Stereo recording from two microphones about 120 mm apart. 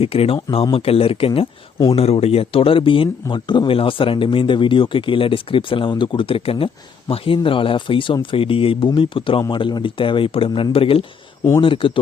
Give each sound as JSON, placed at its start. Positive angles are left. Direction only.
{"t": 0.0, "sound": "speech", "side_deg": 55}